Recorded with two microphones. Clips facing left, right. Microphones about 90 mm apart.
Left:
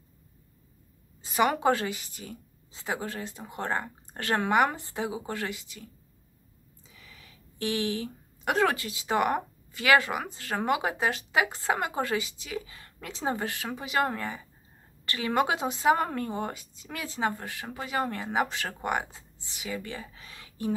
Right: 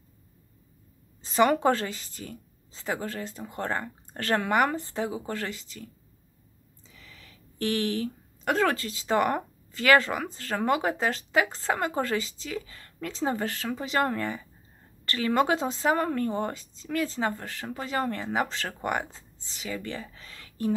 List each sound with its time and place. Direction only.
1.2 s a woman's voice: 15° left (ahead or behind)
7.0 s a woman's voice: 15° left (ahead or behind)